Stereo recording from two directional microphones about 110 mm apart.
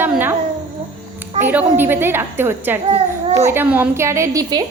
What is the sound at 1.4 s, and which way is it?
A woman's voice, 15° right (ahead or behind).